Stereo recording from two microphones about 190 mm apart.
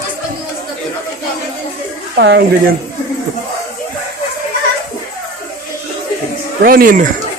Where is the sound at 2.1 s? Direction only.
65° right (ahead or behind).